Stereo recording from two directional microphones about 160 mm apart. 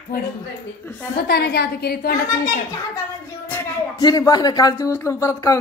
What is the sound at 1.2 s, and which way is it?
Speech, 80° left.